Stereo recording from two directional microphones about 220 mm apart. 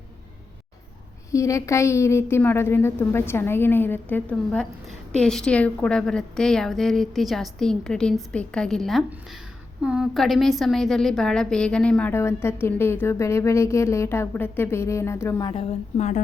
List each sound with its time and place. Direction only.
1.3 s a woman's voice: 15° left (ahead or behind); by 16.2 s 30° left (ahead or behind)